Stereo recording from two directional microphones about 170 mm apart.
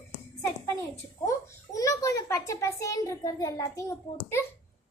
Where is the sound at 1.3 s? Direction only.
20° left (ahead or behind).